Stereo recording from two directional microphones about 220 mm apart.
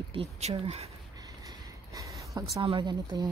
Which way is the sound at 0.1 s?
25° right (ahead or behind).